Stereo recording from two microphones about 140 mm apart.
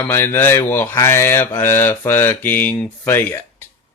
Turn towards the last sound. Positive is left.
turn(degrees=15)  # may be behind; listen again after turning